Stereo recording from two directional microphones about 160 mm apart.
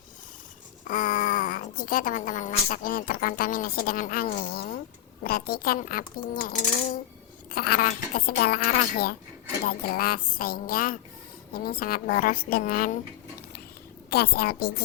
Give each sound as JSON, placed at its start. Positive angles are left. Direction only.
{"t": 0.9, "sound": "speech", "side_deg": 60}
{"t": 4.4, "sound": "speech", "side_deg": 75}
{"t": 14.1, "sound": "speech", "side_deg": 70}